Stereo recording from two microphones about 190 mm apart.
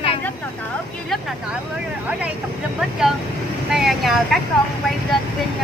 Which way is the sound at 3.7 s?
Centre (ahead or behind).